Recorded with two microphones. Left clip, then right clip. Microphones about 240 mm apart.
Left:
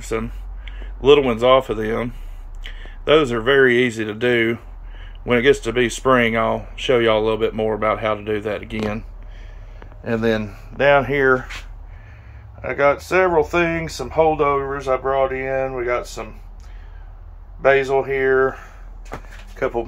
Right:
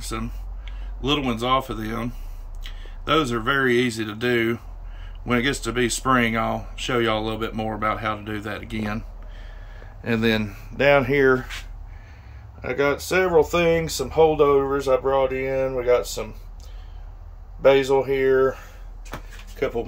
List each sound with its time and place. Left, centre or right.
0.0 s speech: centre
3.1 s speech: centre
10.0 s speech: centre
12.6 s speech: centre
17.6 s speech: centre